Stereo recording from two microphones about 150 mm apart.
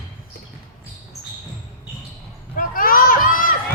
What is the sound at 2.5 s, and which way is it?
Run, 70° left (ahead or behind).